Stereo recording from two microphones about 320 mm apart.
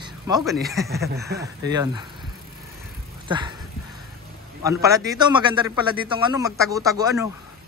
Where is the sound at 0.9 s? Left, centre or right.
Right.